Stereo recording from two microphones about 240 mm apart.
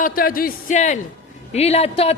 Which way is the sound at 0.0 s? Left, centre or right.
Left.